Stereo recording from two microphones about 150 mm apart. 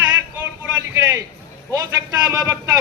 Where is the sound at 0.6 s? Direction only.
20° right (ahead or behind).